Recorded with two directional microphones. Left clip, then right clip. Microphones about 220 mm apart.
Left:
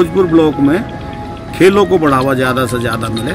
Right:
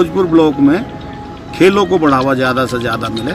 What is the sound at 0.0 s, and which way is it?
Speech, centre (ahead or behind).